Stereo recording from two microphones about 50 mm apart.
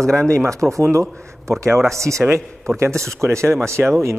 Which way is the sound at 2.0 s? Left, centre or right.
Right.